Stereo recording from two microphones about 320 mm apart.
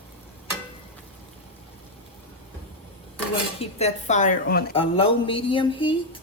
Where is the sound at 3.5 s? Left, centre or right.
Left.